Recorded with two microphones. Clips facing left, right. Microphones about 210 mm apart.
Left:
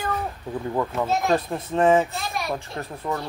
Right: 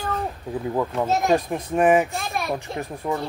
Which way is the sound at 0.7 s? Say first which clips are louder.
Right 1 dB; 10° right (ahead or behind).